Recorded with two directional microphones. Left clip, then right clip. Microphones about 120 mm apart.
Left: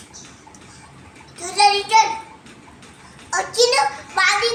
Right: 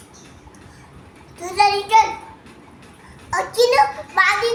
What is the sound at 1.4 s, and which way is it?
Child singing, 5° left (ahead or behind).